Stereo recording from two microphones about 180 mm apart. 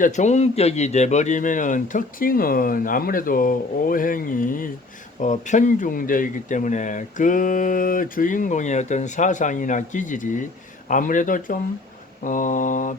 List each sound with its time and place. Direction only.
0.0 s speech: 40° left (ahead or behind)